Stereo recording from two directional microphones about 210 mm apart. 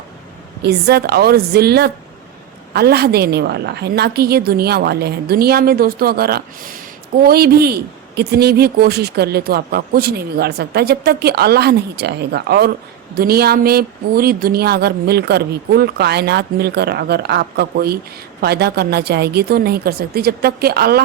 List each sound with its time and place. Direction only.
0.6 s a man's voice: 50° right (ahead or behind)